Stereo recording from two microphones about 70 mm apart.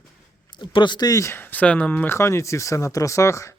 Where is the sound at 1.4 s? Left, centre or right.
Left.